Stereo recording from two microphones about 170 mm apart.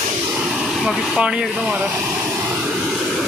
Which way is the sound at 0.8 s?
5° right (ahead or behind).